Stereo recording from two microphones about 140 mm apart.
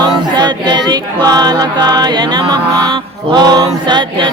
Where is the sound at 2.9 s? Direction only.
30° right (ahead or behind).